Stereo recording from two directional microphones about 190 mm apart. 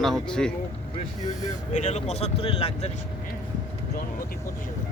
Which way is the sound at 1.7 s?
35° left (ahead or behind).